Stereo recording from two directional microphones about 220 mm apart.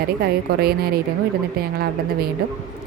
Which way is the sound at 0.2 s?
45° right (ahead or behind).